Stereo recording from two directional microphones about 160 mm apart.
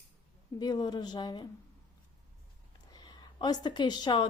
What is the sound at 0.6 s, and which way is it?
Speech, 25° left (ahead or behind).